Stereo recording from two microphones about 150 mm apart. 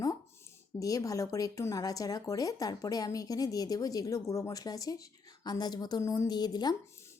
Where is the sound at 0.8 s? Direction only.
25° left (ahead or behind).